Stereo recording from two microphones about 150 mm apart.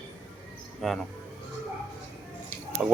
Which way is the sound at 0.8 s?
Centre (ahead or behind).